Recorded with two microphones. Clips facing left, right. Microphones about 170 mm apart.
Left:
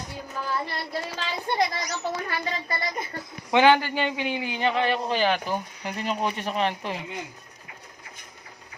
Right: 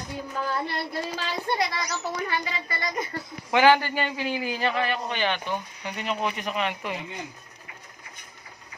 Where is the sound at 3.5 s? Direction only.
20° left (ahead or behind); by 5.3 s 35° left (ahead or behind).